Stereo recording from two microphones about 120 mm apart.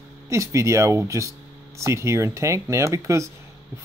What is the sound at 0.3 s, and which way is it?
Speech, 25° right (ahead or behind).